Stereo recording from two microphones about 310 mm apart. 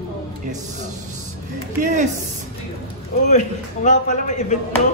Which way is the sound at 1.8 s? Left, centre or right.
Right.